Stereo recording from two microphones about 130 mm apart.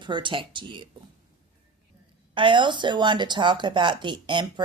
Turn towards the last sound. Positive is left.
turn(degrees=-35)  # may be behind; listen again after turning